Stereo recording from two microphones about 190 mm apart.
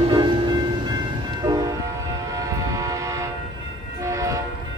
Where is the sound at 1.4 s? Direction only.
20° right (ahead or behind).